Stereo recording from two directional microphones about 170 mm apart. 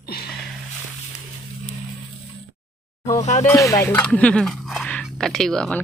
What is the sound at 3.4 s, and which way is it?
Speech, 20° left (ahead or behind).